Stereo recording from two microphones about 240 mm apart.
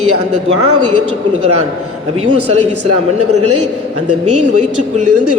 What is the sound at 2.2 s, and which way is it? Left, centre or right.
A man's voice, right.